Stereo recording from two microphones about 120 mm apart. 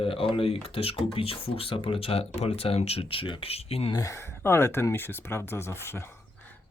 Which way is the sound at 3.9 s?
25° left (ahead or behind).